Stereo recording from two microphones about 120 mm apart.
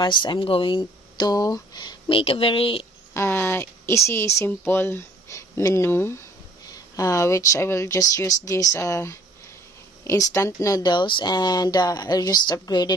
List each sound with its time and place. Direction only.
0.0 s speech: 40° left (ahead or behind)
3.2 s speech: 20° left (ahead or behind)
10.3 s speech: 25° left (ahead or behind)